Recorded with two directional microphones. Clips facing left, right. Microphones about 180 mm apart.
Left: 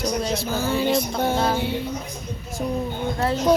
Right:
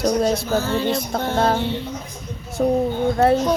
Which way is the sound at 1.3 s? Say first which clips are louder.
Right 5 dB; 55° right (ahead or behind).